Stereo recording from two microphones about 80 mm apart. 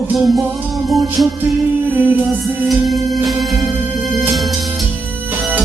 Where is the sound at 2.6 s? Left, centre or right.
Centre.